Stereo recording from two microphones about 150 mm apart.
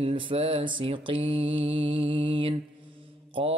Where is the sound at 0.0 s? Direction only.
35° right (ahead or behind).